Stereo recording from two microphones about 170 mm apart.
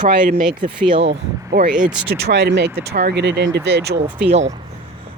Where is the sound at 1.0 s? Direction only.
90° right.